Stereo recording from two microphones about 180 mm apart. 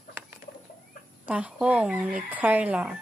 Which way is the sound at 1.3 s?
5° right (ahead or behind).